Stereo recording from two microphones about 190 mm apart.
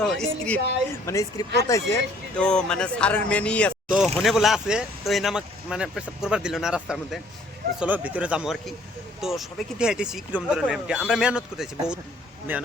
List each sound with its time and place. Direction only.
0.0 s speech: centre (ahead or behind)
1.0 s speech: 15° left (ahead or behind)
2.4 s speech: 5° left (ahead or behind)